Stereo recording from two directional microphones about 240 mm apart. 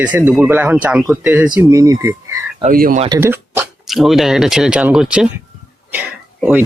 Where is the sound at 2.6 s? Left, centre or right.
Right.